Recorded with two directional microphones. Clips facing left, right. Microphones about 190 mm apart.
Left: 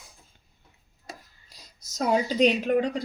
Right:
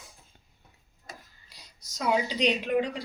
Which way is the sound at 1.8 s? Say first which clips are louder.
Left 3 dB; 45° left (ahead or behind).